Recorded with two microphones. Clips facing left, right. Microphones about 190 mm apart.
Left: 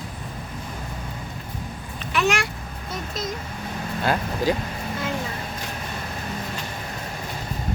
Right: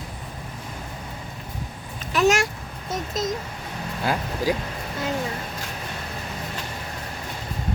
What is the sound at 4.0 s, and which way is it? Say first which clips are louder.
Vehicle: left 1 dB; 5° right (ahead or behind).